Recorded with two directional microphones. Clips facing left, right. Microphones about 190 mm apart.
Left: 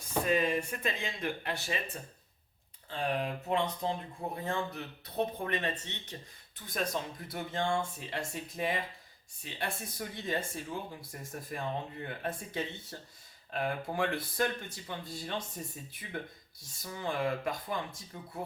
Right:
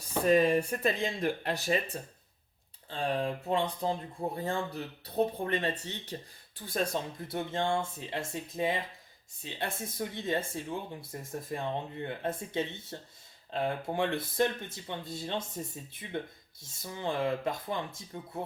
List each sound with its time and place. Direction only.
0.3 s speech: 40° right (ahead or behind)
2.9 s speech: 30° right (ahead or behind)